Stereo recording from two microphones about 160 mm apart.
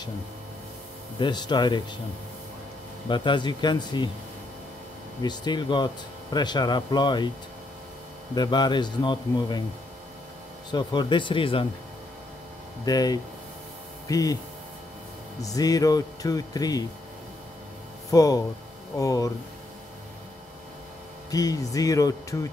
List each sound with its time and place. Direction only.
1.2 s speech: 25° left (ahead or behind)
3.1 s speech: 30° left (ahead or behind)
5.2 s speech: 25° left (ahead or behind)
8.4 s speech: 25° left (ahead or behind)
10.7 s speech: 25° left (ahead or behind)
12.8 s speech: 25° left (ahead or behind)
15.4 s speech: 20° left (ahead or behind)
18.1 s speech: 20° left (ahead or behind)
21.3 s speech: 25° left (ahead or behind)